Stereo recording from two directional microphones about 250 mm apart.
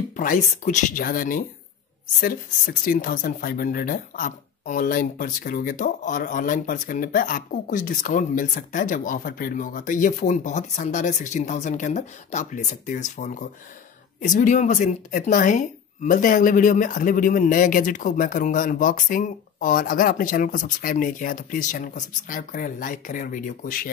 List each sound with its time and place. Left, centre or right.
0.1 s speech: left